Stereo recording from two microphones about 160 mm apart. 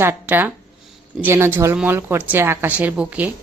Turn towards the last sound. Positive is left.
turn(degrees=-10)  # may be behind; listen again after turning